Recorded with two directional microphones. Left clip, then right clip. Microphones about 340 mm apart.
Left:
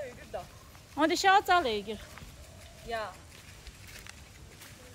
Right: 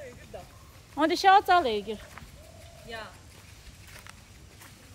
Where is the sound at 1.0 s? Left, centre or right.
Centre.